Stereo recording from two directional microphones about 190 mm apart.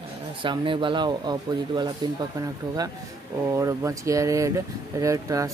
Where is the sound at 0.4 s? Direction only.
25° right (ahead or behind).